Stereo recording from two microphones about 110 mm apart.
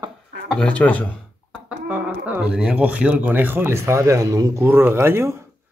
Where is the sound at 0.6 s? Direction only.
15° left (ahead or behind).